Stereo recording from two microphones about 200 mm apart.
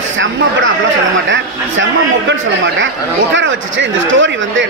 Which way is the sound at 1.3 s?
65° right (ahead or behind).